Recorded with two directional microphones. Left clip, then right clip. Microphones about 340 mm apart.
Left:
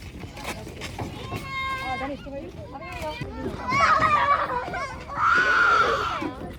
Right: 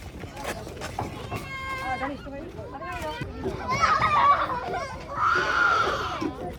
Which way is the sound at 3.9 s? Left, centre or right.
Left.